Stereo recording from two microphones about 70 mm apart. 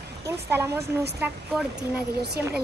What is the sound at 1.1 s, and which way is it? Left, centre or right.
Speech, right.